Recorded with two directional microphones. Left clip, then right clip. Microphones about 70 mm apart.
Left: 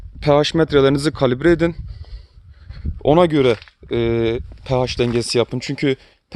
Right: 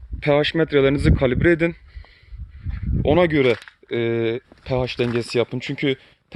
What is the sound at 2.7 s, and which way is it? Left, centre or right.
Speech, left.